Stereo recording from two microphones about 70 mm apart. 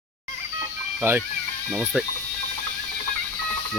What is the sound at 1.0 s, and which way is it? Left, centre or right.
Speech, right.